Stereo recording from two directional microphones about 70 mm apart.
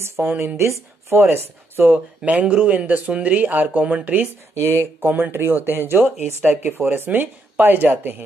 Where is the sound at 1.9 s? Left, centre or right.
Centre.